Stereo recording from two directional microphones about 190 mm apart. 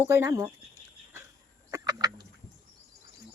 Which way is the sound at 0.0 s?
15° right (ahead or behind).